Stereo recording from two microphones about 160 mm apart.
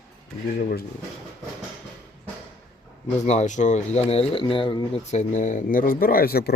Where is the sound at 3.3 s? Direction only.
50° left (ahead or behind); by 5.0 s 30° left (ahead or behind).